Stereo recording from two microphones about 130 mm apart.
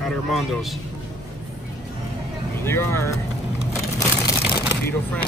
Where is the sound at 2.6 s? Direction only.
20° left (ahead or behind).